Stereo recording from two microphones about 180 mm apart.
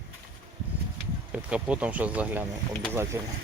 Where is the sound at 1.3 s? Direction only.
5° right (ahead or behind).